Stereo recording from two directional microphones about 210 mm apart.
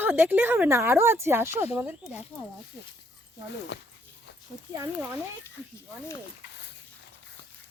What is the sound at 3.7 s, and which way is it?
Speech, 55° left (ahead or behind).